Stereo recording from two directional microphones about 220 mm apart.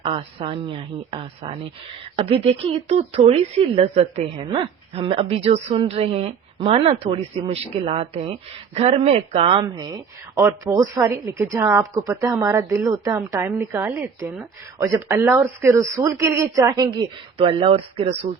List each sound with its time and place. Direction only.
0.0 s a woman's voice: 25° right (ahead or behind)